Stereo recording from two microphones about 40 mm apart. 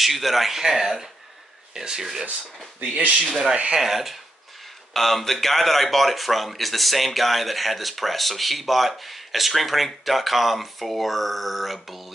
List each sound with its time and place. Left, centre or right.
0.0 s a man's voice: centre
2.8 s speech: right
3.7 s a man's voice: centre
4.9 s a man's voice: centre